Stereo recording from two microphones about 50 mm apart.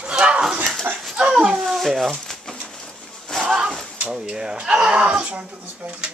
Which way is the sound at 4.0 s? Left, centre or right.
Centre.